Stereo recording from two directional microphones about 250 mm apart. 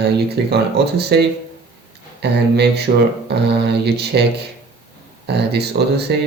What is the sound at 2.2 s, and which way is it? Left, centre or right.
Speech, right.